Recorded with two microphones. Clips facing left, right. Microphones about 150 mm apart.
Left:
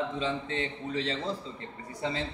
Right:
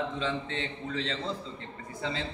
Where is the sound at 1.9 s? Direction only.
15° left (ahead or behind).